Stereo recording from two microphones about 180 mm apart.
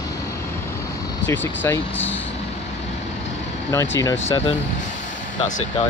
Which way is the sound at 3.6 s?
15° left (ahead or behind).